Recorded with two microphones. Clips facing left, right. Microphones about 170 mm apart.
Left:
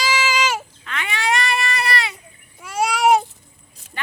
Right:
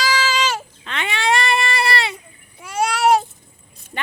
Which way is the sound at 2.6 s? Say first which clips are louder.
Even; centre (ahead or behind).